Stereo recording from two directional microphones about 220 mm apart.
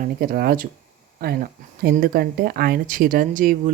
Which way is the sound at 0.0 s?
40° right (ahead or behind).